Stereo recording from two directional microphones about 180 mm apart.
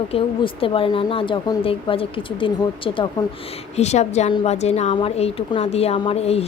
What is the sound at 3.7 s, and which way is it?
A woman's voice, 40° left (ahead or behind).